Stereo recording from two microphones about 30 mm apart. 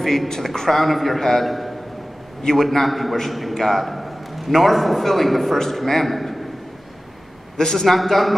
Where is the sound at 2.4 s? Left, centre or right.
Centre.